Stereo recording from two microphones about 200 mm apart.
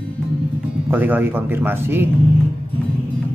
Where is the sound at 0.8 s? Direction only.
10° right (ahead or behind).